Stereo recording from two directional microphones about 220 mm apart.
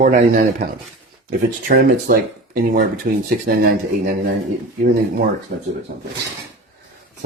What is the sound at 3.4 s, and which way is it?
Speech, 40° right (ahead or behind).